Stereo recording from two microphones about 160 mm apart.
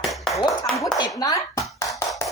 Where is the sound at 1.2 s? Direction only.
20° left (ahead or behind).